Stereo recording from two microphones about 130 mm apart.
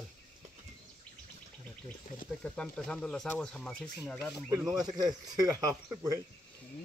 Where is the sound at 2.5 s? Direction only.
10° left (ahead or behind).